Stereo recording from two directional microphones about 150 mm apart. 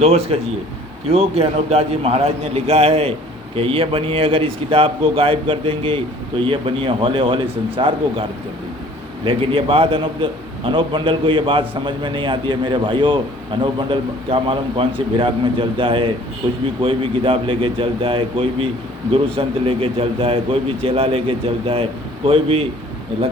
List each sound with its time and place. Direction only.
0.0 s a man's voice: 40° right (ahead or behind)